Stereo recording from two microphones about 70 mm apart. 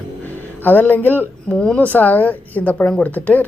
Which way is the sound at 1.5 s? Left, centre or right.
Centre.